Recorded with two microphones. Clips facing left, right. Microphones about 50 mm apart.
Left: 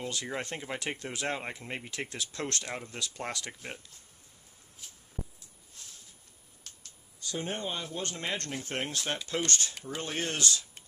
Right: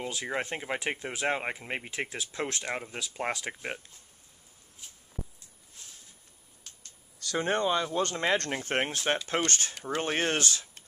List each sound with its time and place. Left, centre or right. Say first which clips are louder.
0.0 s speech: right 3 dB; centre
6.7 s a sound: even; centre
7.2 s speech: right 7 dB; right
8.5 s speech: right 5 dB; right